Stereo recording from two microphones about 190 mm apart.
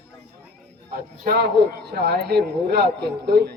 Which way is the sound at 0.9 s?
55° right (ahead or behind).